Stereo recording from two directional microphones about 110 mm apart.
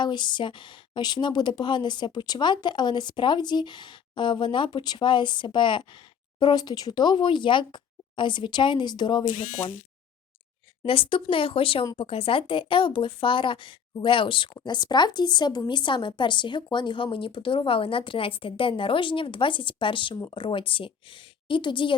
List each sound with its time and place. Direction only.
0.0 s speech: 45° left (ahead or behind)
10.8 s speech: 55° left (ahead or behind)